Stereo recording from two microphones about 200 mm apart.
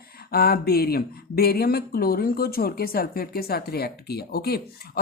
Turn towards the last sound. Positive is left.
turn(degrees=50)  # may be behind; listen again after turning